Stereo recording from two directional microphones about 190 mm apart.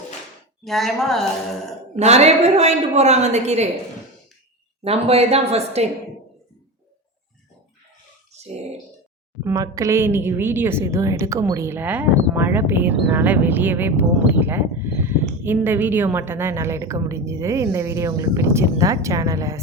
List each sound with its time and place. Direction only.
0.6 s speech: centre (ahead or behind)
2.0 s a woman's voice: 35° right (ahead or behind)
4.8 s a woman's voice: 30° right (ahead or behind)
8.3 s a sound: 35° right (ahead or behind)
9.4 s a woman's voice: 15° right (ahead or behind)